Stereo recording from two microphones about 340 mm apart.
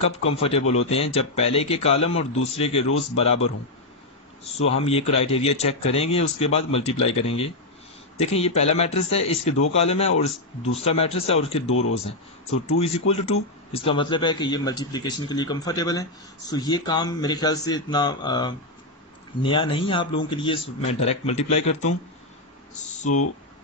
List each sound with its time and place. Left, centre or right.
0.3 s a man's voice: centre
4.6 s a man's voice: centre